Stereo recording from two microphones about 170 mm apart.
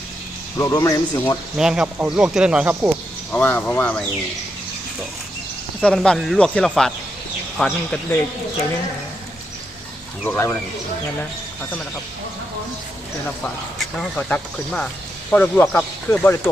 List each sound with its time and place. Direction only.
0.5 s speech: 15° left (ahead or behind)
1.5 s speech: 5° right (ahead or behind)
3.3 s speech: 10° left (ahead or behind)
5.8 s speech: 5° left (ahead or behind)
10.2 s speech: 10° left (ahead or behind)
13.4 s speech: 5° left (ahead or behind)